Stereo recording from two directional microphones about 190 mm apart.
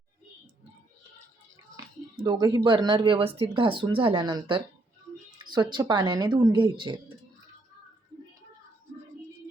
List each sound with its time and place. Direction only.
1.7 s music: 25° right (ahead or behind)
2.6 s speech: 25° right (ahead or behind)